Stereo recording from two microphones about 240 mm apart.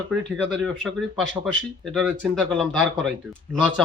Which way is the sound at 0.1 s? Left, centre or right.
Centre.